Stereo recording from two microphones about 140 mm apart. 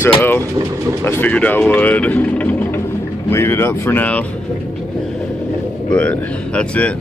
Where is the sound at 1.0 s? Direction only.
10° left (ahead or behind).